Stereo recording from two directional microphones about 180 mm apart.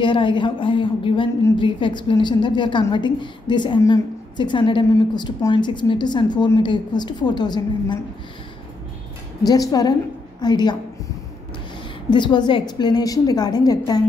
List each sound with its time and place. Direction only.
0.0 s a woman's voice: 25° left (ahead or behind)
9.4 s a woman's voice: 20° left (ahead or behind)
12.1 s a woman's voice: 25° left (ahead or behind)